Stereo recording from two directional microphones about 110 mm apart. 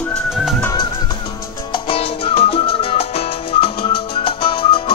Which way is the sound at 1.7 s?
65° left (ahead or behind).